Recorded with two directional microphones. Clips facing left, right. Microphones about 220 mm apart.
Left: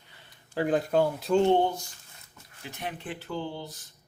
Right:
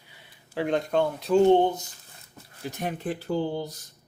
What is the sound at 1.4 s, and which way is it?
Speech, 20° right (ahead or behind).